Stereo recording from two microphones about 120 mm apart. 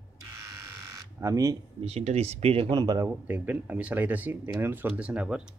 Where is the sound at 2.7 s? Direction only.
30° right (ahead or behind).